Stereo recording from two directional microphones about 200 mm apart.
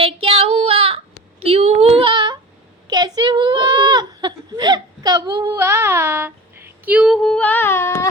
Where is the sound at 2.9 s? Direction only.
20° right (ahead or behind).